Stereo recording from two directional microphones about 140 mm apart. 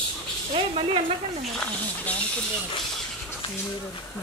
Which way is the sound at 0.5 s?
45° right (ahead or behind).